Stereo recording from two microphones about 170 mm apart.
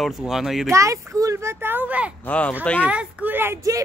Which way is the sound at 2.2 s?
5° left (ahead or behind).